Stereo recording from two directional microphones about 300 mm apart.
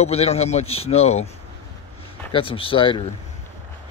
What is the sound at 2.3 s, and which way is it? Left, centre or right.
Speech, centre.